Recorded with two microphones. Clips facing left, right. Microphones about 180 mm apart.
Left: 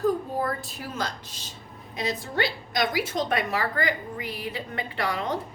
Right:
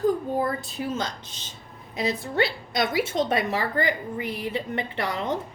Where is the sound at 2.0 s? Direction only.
25° right (ahead or behind).